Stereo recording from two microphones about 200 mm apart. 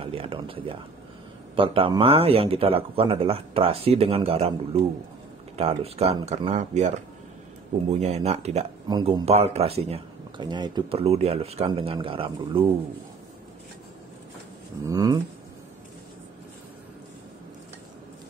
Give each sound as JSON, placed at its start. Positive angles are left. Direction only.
{"t": 0.0, "sound": "speech", "side_deg": -30}
{"t": 7.9, "sound": "speech", "side_deg": -35}
{"t": 8.8, "sound": "speech", "side_deg": -20}
{"t": 14.9, "sound": "speech", "side_deg": -20}